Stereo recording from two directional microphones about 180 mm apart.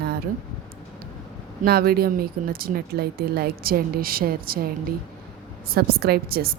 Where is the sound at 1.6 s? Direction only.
60° right (ahead or behind).